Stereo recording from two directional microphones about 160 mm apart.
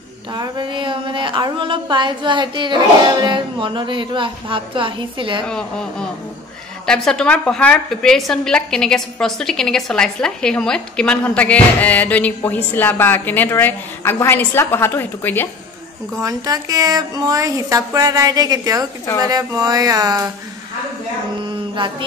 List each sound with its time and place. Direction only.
0.3 s speech: 30° right (ahead or behind)
5.5 s a woman's voice: 5° left (ahead or behind)
16.2 s a woman's voice: 20° right (ahead or behind)